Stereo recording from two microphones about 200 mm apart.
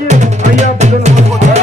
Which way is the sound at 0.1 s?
35° right (ahead or behind).